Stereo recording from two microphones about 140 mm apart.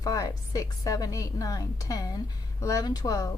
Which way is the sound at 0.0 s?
25° left (ahead or behind).